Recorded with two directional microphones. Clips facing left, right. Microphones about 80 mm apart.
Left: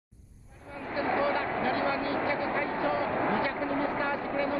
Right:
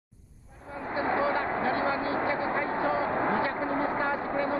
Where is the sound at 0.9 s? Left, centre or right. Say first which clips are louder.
Right 1 dB; right.